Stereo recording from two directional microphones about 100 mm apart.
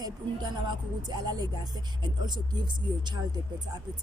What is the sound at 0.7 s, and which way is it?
Speech, 45° right (ahead or behind).